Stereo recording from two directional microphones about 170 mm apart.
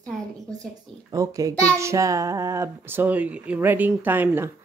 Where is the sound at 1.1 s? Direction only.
20° right (ahead or behind).